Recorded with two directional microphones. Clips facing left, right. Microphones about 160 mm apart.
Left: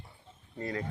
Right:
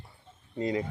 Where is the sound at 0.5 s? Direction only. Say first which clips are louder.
Right 6 dB; 15° right (ahead or behind).